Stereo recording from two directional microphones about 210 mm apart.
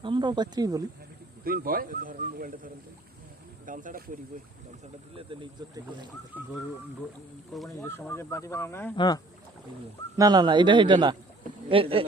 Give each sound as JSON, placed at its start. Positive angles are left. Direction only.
{"t": 0.0, "sound": "speech", "side_deg": -20}
{"t": 1.5, "sound": "speech", "side_deg": -45}
{"t": 3.7, "sound": "speech", "side_deg": -40}
{"t": 5.1, "sound": "a man's voice", "side_deg": -25}
{"t": 6.3, "sound": "speech", "side_deg": -10}
{"t": 7.8, "sound": "speech", "side_deg": 10}
{"t": 10.2, "sound": "a man's voice", "side_deg": -20}